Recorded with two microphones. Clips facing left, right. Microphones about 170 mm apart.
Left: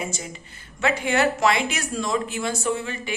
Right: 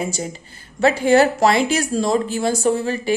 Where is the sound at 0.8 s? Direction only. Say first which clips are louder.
Right 8 dB; 35° right (ahead or behind).